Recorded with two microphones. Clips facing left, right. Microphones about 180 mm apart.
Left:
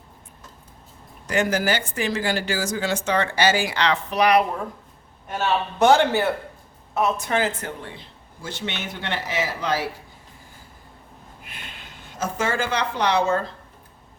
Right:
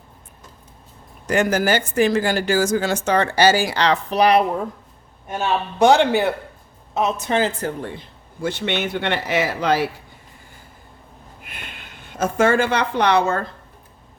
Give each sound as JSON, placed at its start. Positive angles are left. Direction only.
{"t": 1.3, "sound": "a woman's voice", "side_deg": -45}
{"t": 5.4, "sound": "a man's voice", "side_deg": -15}
{"t": 7.9, "sound": "a man's voice", "side_deg": -55}
{"t": 12.2, "sound": "a man's voice", "side_deg": -60}